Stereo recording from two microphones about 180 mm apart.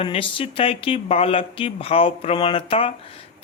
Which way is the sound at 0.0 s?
30° left (ahead or behind).